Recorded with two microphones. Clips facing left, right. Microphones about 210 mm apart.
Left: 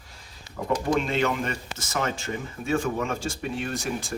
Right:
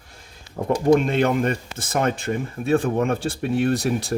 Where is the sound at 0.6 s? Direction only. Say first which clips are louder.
Right 5 dB; 30° right (ahead or behind).